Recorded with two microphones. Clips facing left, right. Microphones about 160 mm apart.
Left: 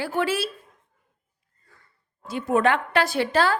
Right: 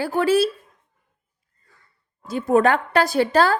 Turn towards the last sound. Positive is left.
turn(degrees=-40)  # may be behind; listen again after turning